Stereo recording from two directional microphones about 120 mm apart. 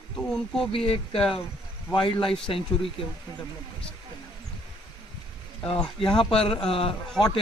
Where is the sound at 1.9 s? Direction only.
45° left (ahead or behind).